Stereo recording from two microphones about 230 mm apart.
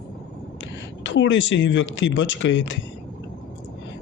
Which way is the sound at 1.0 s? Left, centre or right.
Left.